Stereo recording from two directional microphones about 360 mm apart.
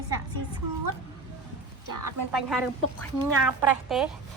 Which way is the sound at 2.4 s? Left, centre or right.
Centre.